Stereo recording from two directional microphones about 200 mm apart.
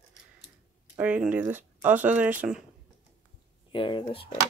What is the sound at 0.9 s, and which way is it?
Speech, 5° right (ahead or behind).